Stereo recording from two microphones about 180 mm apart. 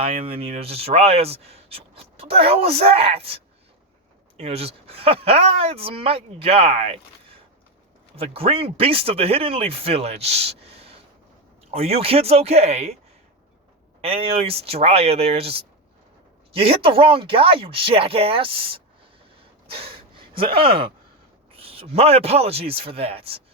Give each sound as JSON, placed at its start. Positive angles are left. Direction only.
{"t": 0.0, "sound": "speech", "side_deg": -30}
{"t": 8.1, "sound": "speech", "side_deg": -30}
{"t": 14.0, "sound": "speech", "side_deg": -30}
{"t": 19.6, "sound": "gasp", "side_deg": -30}
{"t": 21.5, "sound": "speech", "side_deg": -35}